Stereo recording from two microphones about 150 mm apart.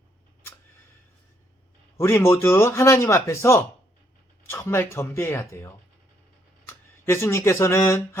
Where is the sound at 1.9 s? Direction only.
15° left (ahead or behind).